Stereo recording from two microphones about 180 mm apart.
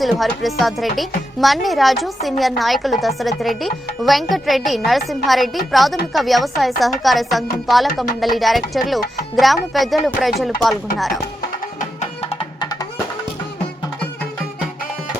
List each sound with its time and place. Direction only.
0.0 s speech: centre (ahead or behind)
11.8 s music: 35° left (ahead or behind)
12.5 s music: 20° left (ahead or behind)